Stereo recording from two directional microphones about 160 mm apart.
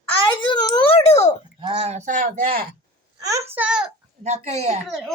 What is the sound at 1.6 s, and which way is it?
Speech, 40° right (ahead or behind).